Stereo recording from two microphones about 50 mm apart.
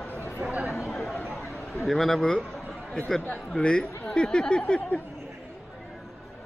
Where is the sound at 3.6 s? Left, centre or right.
Centre.